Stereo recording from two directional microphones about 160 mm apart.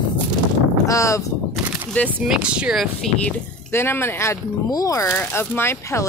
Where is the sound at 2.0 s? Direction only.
5° right (ahead or behind).